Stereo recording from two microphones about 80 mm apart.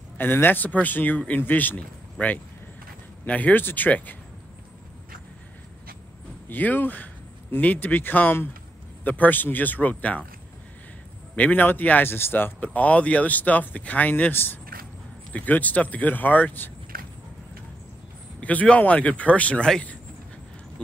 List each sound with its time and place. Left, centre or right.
0.2 s speech: left
6.5 s speech: left
11.3 s speech: left
18.4 s speech: centre